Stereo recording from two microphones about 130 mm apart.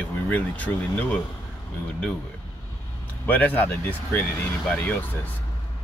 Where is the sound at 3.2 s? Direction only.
15° left (ahead or behind).